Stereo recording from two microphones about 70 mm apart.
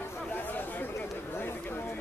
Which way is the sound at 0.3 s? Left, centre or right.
Left.